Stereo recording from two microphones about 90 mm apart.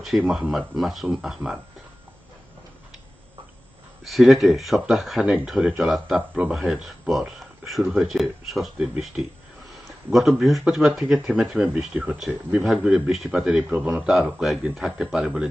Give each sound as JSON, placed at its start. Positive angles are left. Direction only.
{"t": 0.1, "sound": "speech", "side_deg": -5}
{"t": 4.0, "sound": "speech", "side_deg": 0}